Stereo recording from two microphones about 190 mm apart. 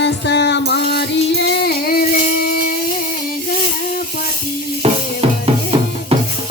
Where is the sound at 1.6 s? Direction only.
50° left (ahead or behind).